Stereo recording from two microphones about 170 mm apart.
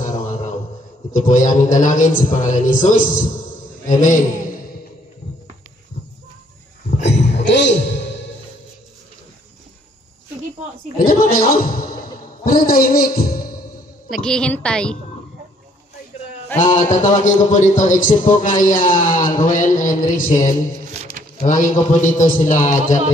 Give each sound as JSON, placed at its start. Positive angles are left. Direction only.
{"t": 0.0, "sound": "mantra", "side_deg": 50}
{"t": 1.1, "sound": "a man's voice", "side_deg": 50}
{"t": 7.0, "sound": "a sound", "side_deg": 90}
{"t": 11.1, "sound": "a man's voice", "side_deg": 60}
{"t": 14.1, "sound": "a woman's voice", "side_deg": 5}
{"t": 16.5, "sound": "a man's voice", "side_deg": 45}